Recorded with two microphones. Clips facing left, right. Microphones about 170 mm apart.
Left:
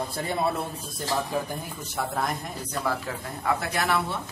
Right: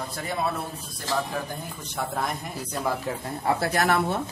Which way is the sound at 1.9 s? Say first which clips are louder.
Even; centre (ahead or behind).